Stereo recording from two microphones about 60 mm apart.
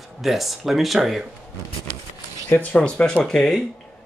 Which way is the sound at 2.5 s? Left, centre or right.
Left.